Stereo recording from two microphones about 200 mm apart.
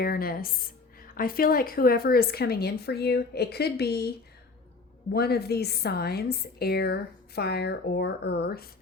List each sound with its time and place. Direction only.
0.0 s a woman's voice: 50° left (ahead or behind)
5.1 s a woman's voice: 55° left (ahead or behind)